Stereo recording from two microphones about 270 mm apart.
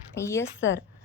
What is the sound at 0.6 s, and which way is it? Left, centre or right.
Speech, left.